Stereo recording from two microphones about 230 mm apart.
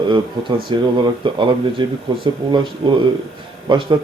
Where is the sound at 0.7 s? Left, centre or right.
Centre.